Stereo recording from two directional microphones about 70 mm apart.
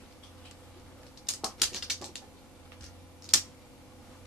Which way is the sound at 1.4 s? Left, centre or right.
Centre.